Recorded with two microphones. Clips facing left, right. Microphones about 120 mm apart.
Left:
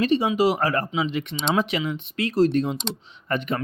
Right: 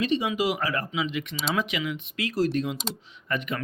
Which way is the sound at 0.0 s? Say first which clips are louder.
Left 5 dB; 40° left (ahead or behind).